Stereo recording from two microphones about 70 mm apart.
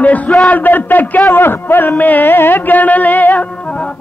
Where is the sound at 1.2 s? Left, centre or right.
Left.